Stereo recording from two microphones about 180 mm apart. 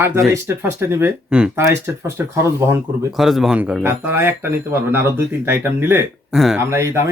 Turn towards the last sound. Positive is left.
turn(degrees=-15)  # may be behind; listen again after turning